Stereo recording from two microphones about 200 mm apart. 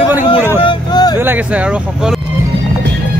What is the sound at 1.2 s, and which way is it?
Speech, 10° right (ahead or behind).